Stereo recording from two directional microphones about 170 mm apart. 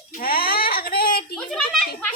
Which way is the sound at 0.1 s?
60° left (ahead or behind).